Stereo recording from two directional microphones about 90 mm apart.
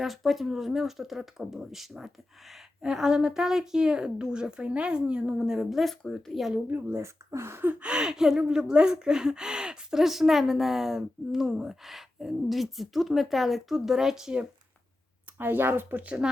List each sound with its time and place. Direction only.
0.0 s a woman's voice: centre (ahead or behind)
6.7 s speech: 25° right (ahead or behind)
7.3 s gasp: 30° right (ahead or behind)
7.6 s speech: 15° right (ahead or behind)
15.4 s speech: 25° right (ahead or behind)